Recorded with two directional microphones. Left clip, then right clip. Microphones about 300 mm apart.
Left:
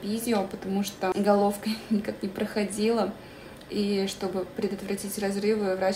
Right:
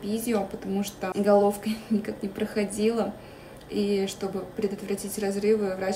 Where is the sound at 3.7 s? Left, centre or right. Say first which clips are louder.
Right 2 dB; left.